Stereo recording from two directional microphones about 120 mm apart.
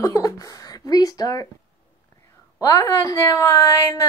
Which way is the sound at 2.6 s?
30° left (ahead or behind).